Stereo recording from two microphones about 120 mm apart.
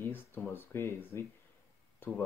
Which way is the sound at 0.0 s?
15° left (ahead or behind).